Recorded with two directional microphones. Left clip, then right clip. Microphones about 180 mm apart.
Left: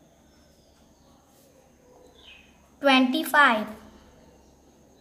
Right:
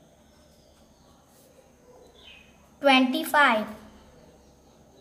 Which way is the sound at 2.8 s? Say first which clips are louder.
Even; 15° left (ahead or behind).